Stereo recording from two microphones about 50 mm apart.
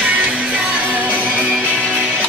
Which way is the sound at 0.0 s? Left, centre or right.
Right.